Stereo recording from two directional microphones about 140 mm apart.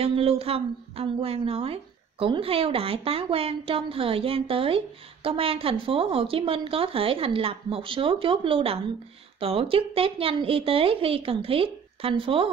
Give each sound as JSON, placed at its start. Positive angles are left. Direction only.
{"t": 0.0, "sound": "a woman's voice", "side_deg": -45}